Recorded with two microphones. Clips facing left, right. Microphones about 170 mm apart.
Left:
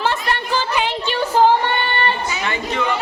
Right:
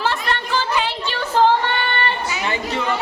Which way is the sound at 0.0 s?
Centre (ahead or behind).